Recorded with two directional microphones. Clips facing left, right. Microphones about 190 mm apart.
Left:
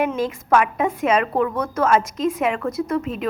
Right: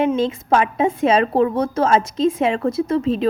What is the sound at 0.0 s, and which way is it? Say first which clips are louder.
A woman's voice: right 4 dB; 25° right (ahead or behind).